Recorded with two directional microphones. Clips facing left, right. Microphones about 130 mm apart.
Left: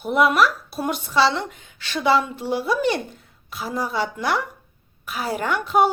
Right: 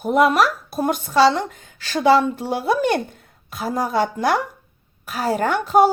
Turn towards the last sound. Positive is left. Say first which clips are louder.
# right 4 dB
turn(degrees=-40)  # may be behind; listen again after turning